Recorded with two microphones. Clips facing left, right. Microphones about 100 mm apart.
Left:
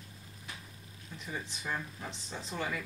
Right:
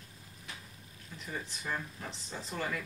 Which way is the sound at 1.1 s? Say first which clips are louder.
Even; centre (ahead or behind).